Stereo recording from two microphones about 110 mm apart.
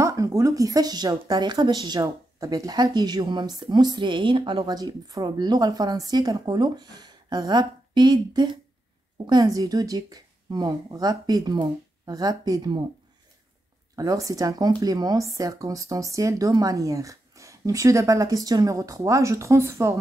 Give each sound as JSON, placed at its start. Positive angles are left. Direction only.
{"t": 0.0, "sound": "speech", "side_deg": -30}
{"t": 13.9, "sound": "speech", "side_deg": -30}